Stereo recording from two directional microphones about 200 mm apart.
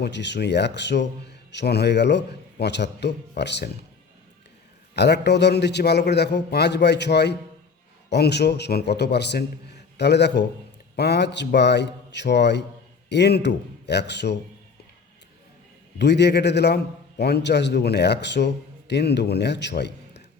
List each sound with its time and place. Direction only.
0.0 s a man's voice: 60° left (ahead or behind)
4.9 s a man's voice: 55° left (ahead or behind)
16.0 s a man's voice: 60° left (ahead or behind)